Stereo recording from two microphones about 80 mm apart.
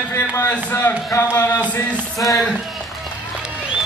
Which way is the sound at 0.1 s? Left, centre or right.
Left.